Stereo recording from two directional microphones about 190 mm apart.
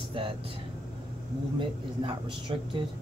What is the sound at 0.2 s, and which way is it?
Speech, 25° right (ahead or behind).